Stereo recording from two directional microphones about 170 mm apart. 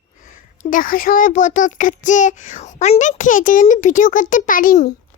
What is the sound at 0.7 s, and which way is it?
A child's voice, 55° left (ahead or behind).